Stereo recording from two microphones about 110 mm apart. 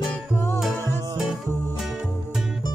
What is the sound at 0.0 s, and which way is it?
Music, 5° right (ahead or behind).